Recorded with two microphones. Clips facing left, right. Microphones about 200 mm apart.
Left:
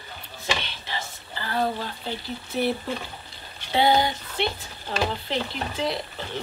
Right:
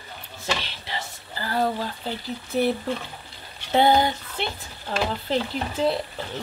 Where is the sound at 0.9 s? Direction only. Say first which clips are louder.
Even; 35° right (ahead or behind).